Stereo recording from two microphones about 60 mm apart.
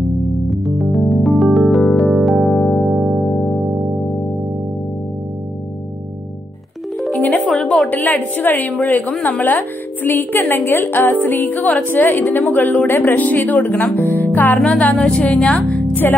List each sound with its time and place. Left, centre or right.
0.3 s music: centre
2.9 s music: centre
3.3 s music: centre
7.3 s music: centre
7.9 s a woman's voice: left
13.9 s music: left
14.6 s speech: centre
15.5 s speech: left